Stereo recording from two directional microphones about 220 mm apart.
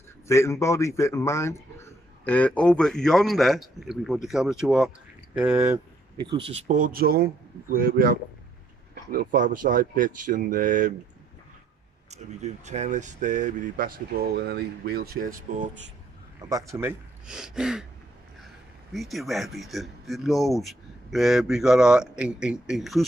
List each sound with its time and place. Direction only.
0.3 s speech: 10° left (ahead or behind); by 11.0 s 35° right (ahead or behind)
12.1 s speech: 30° right (ahead or behind)
16.3 s speech: 15° right (ahead or behind)
18.9 s speech: centre (ahead or behind)